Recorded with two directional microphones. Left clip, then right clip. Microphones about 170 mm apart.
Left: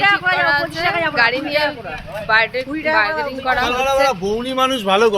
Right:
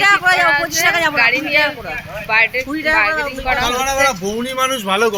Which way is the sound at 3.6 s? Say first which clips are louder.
Even; 30° left (ahead or behind).